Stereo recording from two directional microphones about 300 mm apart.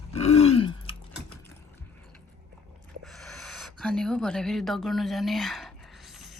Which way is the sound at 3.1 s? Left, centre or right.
Centre.